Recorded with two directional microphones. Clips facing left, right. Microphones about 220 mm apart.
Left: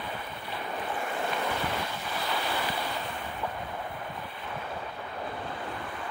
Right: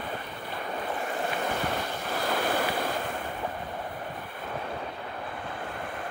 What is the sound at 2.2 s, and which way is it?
Waves, 50° right (ahead or behind).